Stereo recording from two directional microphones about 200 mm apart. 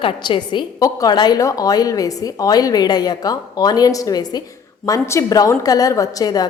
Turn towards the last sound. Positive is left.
turn(degrees=20)  # may be behind; listen again after turning